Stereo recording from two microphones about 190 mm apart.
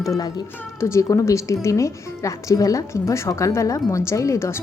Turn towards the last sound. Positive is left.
turn(degrees=15)  # may be behind; listen again after turning